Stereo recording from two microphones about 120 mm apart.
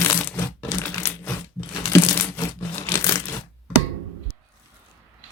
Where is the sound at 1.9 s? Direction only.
20° left (ahead or behind).